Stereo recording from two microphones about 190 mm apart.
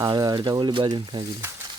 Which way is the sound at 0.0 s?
20° right (ahead or behind).